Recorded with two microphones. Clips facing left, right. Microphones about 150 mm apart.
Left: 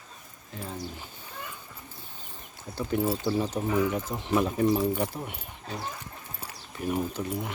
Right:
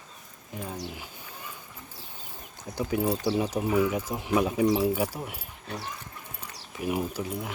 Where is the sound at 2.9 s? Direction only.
5° right (ahead or behind).